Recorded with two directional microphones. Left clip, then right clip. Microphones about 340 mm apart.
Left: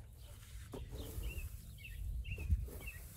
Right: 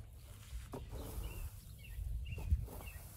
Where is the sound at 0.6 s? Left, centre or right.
Centre.